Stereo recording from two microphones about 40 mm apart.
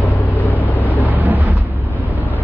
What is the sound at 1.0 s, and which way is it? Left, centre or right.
Vehicle, right.